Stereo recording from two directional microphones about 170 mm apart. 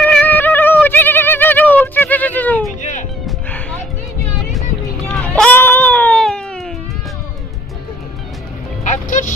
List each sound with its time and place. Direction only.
0.0 s a sound: 10° left (ahead or behind)
2.8 s music: 45° left (ahead or behind)
3.2 s music: 5° left (ahead or behind)
5.0 s baby cry: 10° left (ahead or behind)
8.8 s music: 45° left (ahead or behind)